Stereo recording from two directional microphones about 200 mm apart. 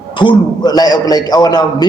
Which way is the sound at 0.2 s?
20° left (ahead or behind).